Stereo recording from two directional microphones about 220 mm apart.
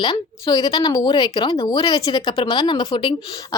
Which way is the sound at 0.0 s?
20° left (ahead or behind).